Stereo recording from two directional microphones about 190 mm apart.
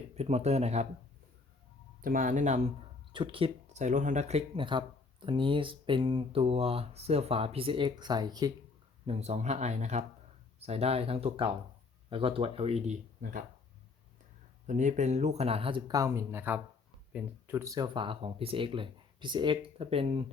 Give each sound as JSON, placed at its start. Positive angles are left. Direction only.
{"t": 0.2, "sound": "speech", "side_deg": -35}
{"t": 2.0, "sound": "speech", "side_deg": -45}
{"t": 3.1, "sound": "speech", "side_deg": -25}
{"t": 9.0, "sound": "speech", "side_deg": -35}
{"t": 14.7, "sound": "speech", "side_deg": -40}